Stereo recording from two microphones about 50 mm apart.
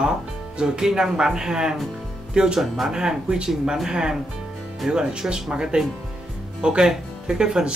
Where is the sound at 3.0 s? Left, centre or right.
Centre.